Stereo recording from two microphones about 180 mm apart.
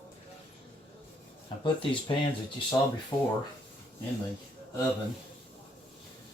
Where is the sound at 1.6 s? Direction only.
25° left (ahead or behind).